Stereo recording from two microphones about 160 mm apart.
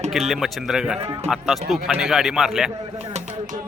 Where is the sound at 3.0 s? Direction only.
45° right (ahead or behind).